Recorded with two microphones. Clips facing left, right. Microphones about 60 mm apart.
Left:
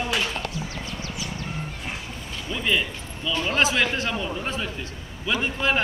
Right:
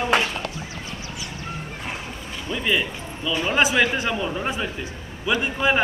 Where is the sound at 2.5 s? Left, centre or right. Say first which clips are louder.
Right 1 dB; centre.